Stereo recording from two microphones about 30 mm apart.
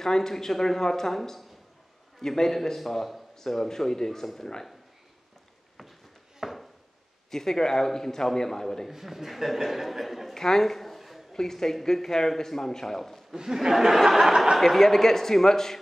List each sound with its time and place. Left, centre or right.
0.0 s a man's voice: centre
6.4 s a sound: centre
7.2 s a man's voice: centre
8.9 s speech: centre
10.3 s a sound: centre
11.3 s a man's voice: centre
13.3 s speech: centre
14.6 s a man's voice: centre